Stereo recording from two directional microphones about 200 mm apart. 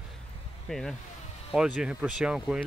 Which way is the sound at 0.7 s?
Centre (ahead or behind).